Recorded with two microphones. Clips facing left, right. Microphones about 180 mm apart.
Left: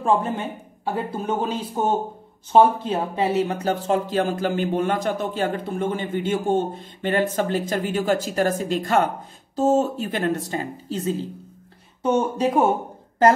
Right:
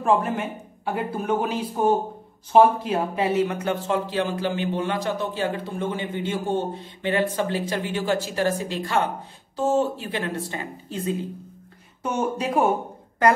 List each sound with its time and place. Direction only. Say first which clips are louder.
0.0 s speech: even; 30° left (ahead or behind)